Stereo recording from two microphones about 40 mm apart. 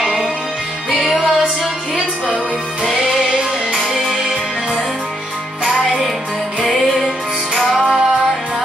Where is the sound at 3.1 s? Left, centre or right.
Centre.